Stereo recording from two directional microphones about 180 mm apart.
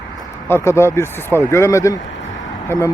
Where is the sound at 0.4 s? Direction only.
15° left (ahead or behind).